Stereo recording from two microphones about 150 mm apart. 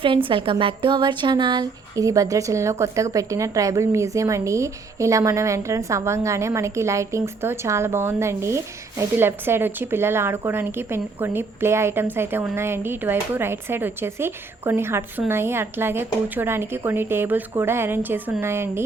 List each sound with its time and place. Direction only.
0.3 s speech: 35° right (ahead or behind); by 18.8 s 15° right (ahead or behind)